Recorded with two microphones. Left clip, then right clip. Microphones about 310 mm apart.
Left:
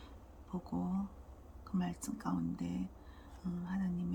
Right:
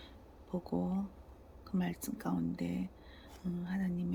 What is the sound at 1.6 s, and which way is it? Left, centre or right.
Speech, centre.